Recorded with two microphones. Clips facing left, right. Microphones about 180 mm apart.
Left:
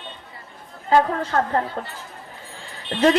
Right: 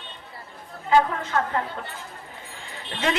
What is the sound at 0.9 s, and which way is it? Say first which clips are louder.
Speech: left 2 dB; 40° left (ahead or behind).